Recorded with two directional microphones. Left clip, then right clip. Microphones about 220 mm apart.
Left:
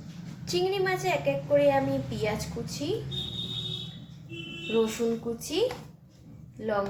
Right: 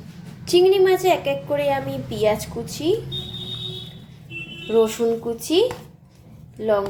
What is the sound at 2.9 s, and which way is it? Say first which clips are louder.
Speech: right 11 dB; 40° right (ahead or behind).